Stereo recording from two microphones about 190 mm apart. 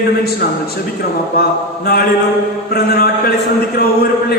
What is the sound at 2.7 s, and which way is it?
Speech, 55° left (ahead or behind).